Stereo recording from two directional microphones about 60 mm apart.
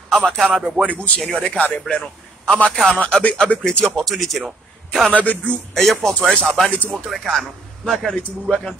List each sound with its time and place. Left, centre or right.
0.1 s a man's voice: centre
0.5 s speech: centre
0.8 s a man's voice: left
3.0 s speech: left
3.6 s speech: centre
4.1 s speech: centre
5.1 s speech: left
5.8 s speech: centre